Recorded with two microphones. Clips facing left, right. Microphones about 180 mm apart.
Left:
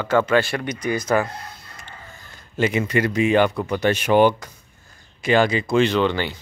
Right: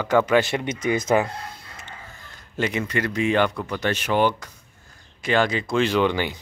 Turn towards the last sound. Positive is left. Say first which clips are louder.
# left 1 dB
turn(degrees=-10)  # may be behind; listen again after turning